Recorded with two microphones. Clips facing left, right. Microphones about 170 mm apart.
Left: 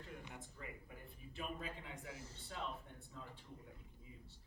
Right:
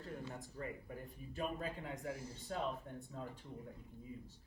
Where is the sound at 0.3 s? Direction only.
40° right (ahead or behind).